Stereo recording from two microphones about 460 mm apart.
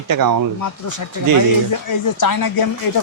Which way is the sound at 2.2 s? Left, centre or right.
Left.